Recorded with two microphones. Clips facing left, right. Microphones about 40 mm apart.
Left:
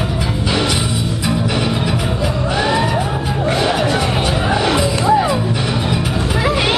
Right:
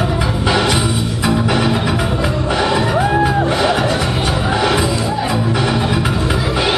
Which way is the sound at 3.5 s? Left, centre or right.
Centre.